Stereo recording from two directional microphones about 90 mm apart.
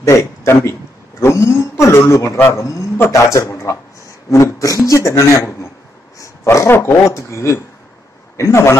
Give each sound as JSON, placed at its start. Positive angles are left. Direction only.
{"t": 0.0, "sound": "a man's voice", "side_deg": 35}